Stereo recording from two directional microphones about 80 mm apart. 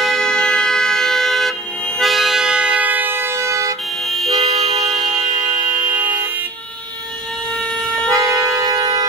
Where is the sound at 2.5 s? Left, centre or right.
Centre; by 3.7 s right.